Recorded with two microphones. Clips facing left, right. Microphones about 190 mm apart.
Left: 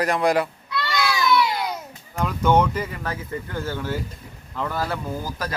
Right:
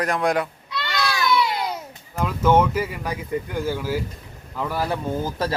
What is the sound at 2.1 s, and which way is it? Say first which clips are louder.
A man's voice: right 1 dB; 5° right (ahead or behind).